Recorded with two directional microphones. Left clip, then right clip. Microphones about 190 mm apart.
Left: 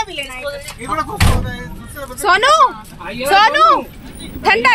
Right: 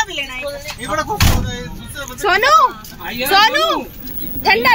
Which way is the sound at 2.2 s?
10° left (ahead or behind).